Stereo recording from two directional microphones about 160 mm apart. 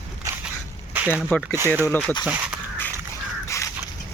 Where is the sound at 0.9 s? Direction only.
10° right (ahead or behind).